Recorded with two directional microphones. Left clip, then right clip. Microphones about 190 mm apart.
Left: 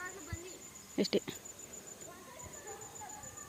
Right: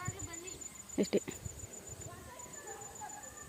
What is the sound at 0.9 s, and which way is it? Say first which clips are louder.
Speech: even; centre (ahead or behind).